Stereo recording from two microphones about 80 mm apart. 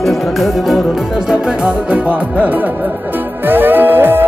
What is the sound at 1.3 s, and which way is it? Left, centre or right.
Music, centre.